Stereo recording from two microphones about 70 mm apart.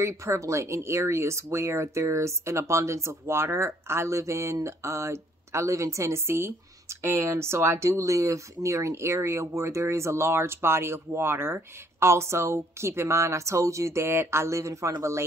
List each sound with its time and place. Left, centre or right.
0.0 s speech: right